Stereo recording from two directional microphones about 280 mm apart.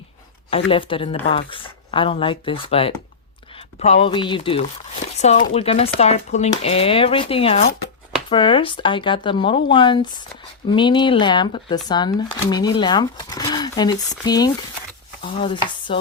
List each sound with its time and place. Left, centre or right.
0.5 s speech: centre
15.2 s stir: centre